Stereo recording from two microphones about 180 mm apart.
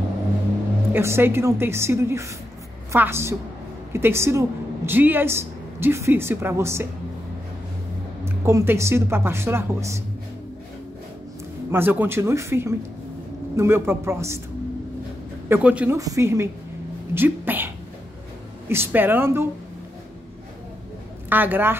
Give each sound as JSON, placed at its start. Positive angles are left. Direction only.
{"t": 0.9, "sound": "a woman's voice", "side_deg": -10}
{"t": 8.3, "sound": "a woman's voice", "side_deg": -15}
{"t": 11.7, "sound": "a woman's voice", "side_deg": -10}
{"t": 15.4, "sound": "a woman's voice", "side_deg": -10}
{"t": 17.1, "sound": "a sound", "side_deg": -10}
{"t": 18.7, "sound": "a woman's voice", "side_deg": -10}
{"t": 21.3, "sound": "a woman's voice", "side_deg": -10}